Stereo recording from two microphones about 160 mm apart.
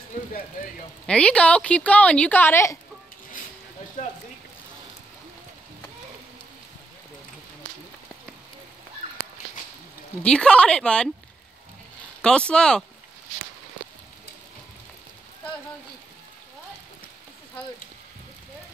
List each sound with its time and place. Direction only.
1.0 s a woman's voice: 5° left (ahead or behind)
4.0 s a sound: 55° left (ahead or behind)
10.2 s a woman's voice: 5° left (ahead or behind)
12.2 s a woman's voice: 5° left (ahead or behind)